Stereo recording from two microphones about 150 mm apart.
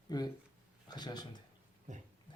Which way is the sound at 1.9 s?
55° right (ahead or behind).